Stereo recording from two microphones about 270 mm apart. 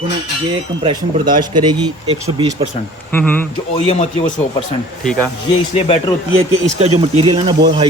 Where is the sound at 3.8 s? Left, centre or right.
Left.